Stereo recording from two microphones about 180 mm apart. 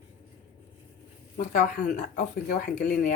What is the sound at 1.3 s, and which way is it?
Speech, 45° left (ahead or behind).